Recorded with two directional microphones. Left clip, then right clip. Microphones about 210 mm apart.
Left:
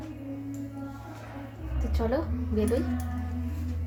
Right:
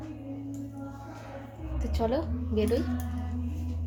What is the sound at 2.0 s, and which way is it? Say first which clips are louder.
Speech: even; 5° right (ahead or behind).